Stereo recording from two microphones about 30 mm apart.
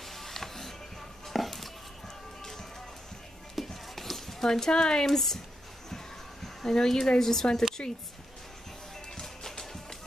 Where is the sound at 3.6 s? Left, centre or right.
Centre.